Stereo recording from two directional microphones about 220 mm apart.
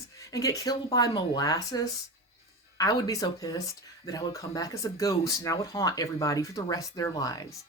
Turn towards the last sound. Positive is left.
turn(degrees=15)  # may be behind; listen again after turning